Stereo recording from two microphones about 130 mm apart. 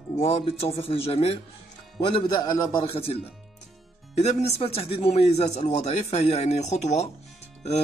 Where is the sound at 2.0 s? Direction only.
35° left (ahead or behind).